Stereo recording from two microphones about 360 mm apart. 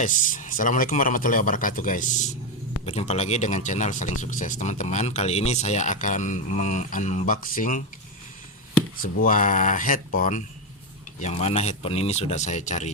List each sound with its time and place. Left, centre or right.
0.0 s speech: left
9.0 s speech: left